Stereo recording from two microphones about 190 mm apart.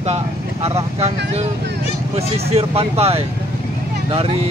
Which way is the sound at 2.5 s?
30° right (ahead or behind).